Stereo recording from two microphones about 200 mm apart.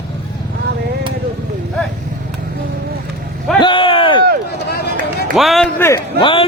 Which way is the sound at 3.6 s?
25° left (ahead or behind).